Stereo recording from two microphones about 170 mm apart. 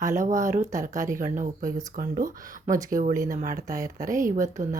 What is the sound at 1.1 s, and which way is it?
Speech, 50° right (ahead or behind).